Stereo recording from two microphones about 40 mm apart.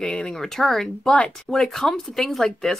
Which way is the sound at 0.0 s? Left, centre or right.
Left.